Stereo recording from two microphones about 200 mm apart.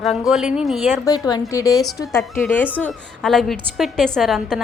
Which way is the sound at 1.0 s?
20° left (ahead or behind).